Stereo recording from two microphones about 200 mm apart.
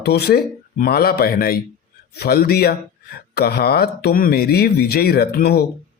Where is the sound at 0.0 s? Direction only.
55° left (ahead or behind).